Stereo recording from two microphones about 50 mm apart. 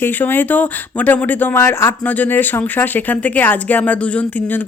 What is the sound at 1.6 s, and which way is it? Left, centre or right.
Speech, left.